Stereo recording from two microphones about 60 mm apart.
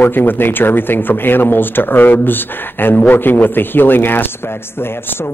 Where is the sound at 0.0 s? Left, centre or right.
Left.